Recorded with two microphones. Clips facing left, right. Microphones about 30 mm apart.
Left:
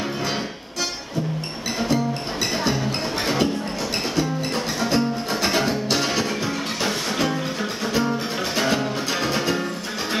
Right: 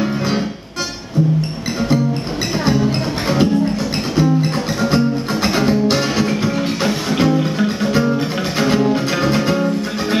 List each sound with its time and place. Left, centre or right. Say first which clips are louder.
2.7 s music: right 7 dB; centre
4.7 s music: right 6 dB; centre